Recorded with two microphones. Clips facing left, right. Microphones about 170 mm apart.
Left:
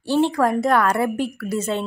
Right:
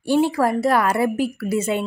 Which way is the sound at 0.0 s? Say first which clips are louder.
Even; 10° right (ahead or behind).